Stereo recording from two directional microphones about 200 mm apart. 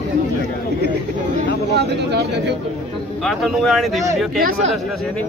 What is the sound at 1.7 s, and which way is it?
Speech, 55° right (ahead or behind).